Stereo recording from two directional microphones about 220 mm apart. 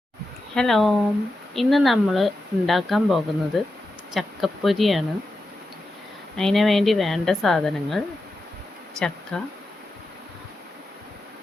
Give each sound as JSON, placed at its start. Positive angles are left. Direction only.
{"t": 0.5, "sound": "speech", "side_deg": 0}
{"t": 6.3, "sound": "speech", "side_deg": 0}